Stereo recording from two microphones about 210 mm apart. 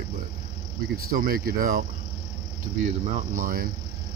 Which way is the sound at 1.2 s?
45° right (ahead or behind).